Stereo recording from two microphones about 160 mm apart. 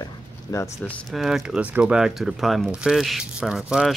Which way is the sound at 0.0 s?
20° left (ahead or behind).